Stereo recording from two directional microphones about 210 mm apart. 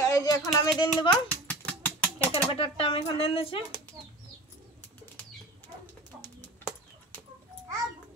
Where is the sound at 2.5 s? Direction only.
25° left (ahead or behind).